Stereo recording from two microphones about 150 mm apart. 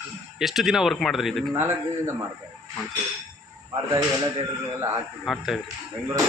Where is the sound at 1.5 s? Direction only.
15° right (ahead or behind).